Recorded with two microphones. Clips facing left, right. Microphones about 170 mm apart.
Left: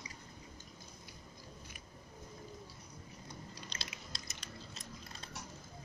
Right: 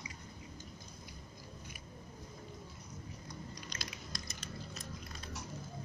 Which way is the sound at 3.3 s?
30° left (ahead or behind).